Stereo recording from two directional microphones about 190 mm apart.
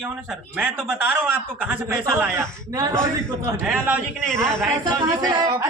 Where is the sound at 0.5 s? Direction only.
10° right (ahead or behind).